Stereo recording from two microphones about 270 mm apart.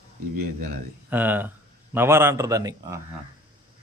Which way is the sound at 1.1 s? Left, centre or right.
Centre.